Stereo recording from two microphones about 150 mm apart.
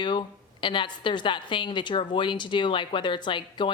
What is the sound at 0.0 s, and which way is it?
A woman's voice, 35° left (ahead or behind).